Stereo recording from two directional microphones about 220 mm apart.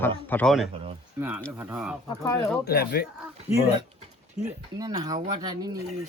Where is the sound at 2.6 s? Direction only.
45° left (ahead or behind).